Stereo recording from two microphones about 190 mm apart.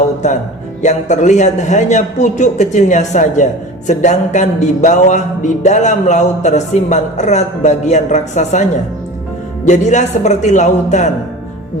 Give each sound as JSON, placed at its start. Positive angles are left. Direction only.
{"t": 0.8, "sound": "music", "side_deg": 40}
{"t": 9.6, "sound": "music", "side_deg": 40}